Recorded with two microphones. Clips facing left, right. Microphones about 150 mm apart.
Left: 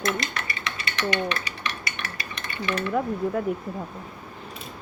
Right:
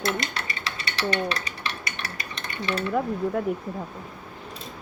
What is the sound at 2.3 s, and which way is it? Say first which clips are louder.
Stir: even; 30° right (ahead or behind).